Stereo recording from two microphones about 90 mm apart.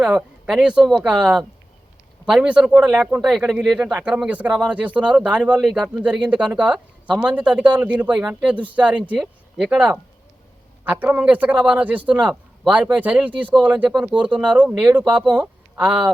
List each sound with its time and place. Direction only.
0.0 s a man's voice: 10° right (ahead or behind)
3.2 s a man's voice: 5° right (ahead or behind)
5.6 s speech: 5° left (ahead or behind)
5.9 s a man's voice: 15° right (ahead or behind)